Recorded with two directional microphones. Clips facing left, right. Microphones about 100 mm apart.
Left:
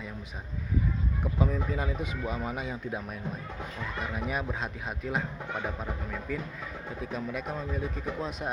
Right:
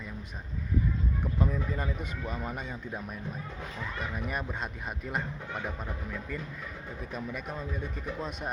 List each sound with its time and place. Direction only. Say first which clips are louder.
1.2 s speech: left 3 dB; 5° left (ahead or behind)